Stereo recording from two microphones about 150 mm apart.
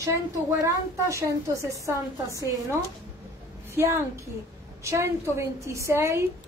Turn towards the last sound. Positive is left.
turn(degrees=-20)  # may be behind; listen again after turning